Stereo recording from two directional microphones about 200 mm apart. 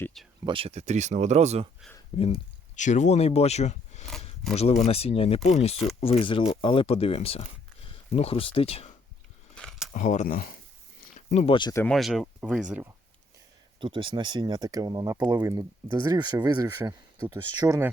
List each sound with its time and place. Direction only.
0.0 s speech: centre (ahead or behind)
0.4 s speech: 25° right (ahead or behind)
2.1 s speech: 30° left (ahead or behind)
9.6 s a sound: centre (ahead or behind)
9.9 s speech: 35° left (ahead or behind)
11.3 s speech: 30° left (ahead or behind)
11.8 s speech: centre (ahead or behind)
13.7 s speech: 25° right (ahead or behind)